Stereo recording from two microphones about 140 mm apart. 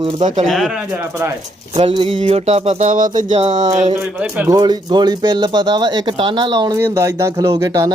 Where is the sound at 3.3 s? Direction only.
50° right (ahead or behind).